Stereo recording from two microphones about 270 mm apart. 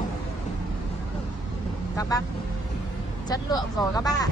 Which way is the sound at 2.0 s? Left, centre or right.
Centre.